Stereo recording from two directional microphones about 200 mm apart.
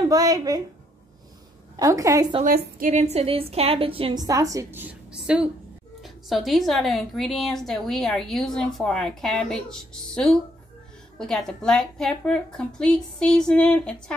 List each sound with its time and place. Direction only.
0.1 s a woman's voice: 20° right (ahead or behind)
1.8 s a woman's voice: 15° right (ahead or behind)
2.4 s a woman's voice: 45° right (ahead or behind); by 14.1 s 5° left (ahead or behind)